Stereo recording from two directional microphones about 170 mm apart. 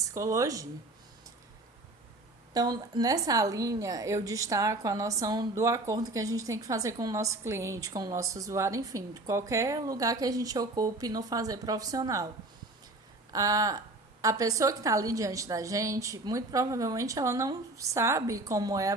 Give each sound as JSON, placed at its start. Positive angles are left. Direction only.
{"t": 0.0, "sound": "a woman's voice", "side_deg": -20}
{"t": 2.5, "sound": "a woman's voice", "side_deg": -25}
{"t": 13.3, "sound": "a woman's voice", "side_deg": -20}